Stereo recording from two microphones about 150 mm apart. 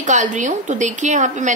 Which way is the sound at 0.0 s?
55° right (ahead or behind).